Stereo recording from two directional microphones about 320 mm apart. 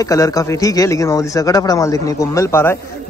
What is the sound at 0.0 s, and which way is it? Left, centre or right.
Speech, centre.